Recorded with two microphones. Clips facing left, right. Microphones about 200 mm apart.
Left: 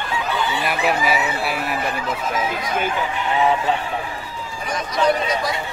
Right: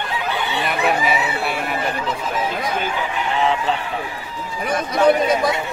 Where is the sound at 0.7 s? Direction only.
5° left (ahead or behind).